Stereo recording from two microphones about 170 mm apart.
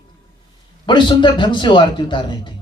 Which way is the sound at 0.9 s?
30° left (ahead or behind).